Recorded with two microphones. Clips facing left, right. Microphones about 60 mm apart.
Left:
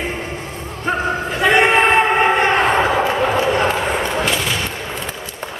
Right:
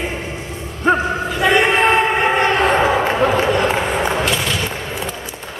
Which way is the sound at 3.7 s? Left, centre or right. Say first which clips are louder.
Right 1 dB; centre.